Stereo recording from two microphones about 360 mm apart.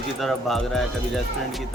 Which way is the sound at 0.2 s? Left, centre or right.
Centre.